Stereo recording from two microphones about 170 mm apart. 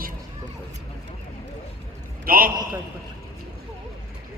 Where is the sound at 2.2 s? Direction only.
55° right (ahead or behind).